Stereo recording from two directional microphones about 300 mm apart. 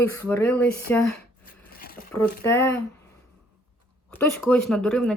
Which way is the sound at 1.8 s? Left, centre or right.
Left.